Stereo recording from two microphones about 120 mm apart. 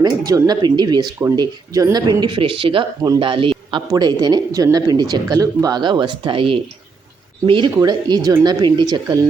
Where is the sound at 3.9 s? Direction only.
35° right (ahead or behind).